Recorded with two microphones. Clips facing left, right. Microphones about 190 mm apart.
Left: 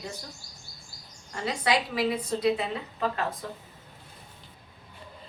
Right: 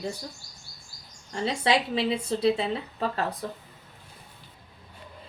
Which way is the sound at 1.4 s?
25° right (ahead or behind).